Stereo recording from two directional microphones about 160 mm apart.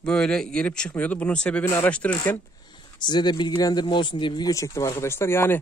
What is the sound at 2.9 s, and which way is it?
Speech, 30° left (ahead or behind).